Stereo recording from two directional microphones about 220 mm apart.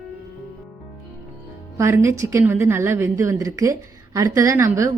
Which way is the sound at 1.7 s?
15° right (ahead or behind).